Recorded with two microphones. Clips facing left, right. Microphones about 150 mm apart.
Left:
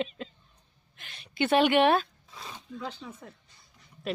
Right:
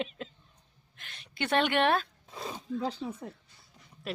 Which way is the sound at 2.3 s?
40° right (ahead or behind).